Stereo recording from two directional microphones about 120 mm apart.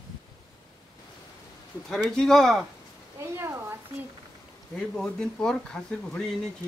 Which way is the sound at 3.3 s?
20° right (ahead or behind).